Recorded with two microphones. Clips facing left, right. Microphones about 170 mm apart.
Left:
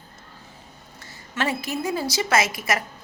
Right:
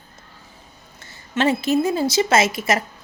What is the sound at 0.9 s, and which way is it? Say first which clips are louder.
A woman's voice: right 6 dB; 25° right (ahead or behind).